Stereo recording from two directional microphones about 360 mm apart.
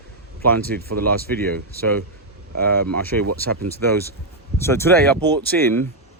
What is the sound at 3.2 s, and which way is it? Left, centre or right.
Speech, right.